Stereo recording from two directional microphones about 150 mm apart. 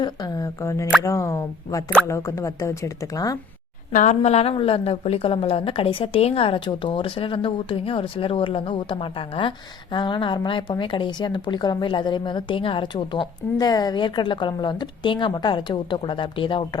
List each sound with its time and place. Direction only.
0.0 s a woman's voice: 25° left (ahead or behind)
3.9 s a woman's voice: 50° left (ahead or behind); by 16.6 s 35° left (ahead or behind)